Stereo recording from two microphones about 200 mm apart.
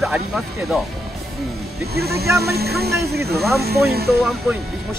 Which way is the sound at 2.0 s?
50° right (ahead or behind).